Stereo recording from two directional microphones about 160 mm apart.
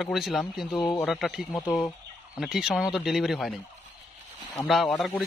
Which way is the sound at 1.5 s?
10° left (ahead or behind).